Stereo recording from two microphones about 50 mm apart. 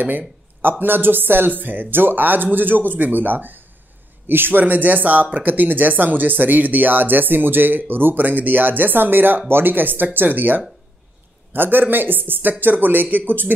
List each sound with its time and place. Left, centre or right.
0.6 s speech: right